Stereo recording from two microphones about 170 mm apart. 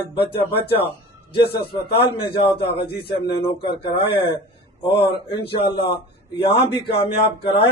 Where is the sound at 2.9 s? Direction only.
70° left (ahead or behind).